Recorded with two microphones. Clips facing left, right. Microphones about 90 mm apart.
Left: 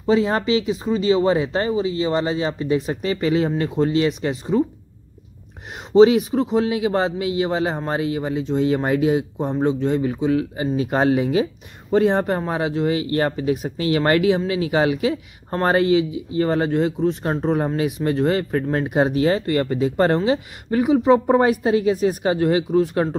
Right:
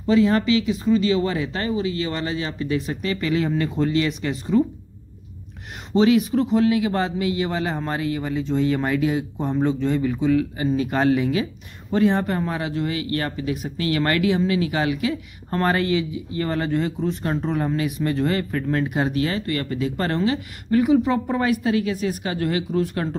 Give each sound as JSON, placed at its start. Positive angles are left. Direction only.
{"t": 0.0, "sound": "speech", "side_deg": 20}
{"t": 5.9, "sound": "speech", "side_deg": 25}
{"t": 21.3, "sound": "speech", "side_deg": 30}
{"t": 22.7, "sound": "speech", "side_deg": 10}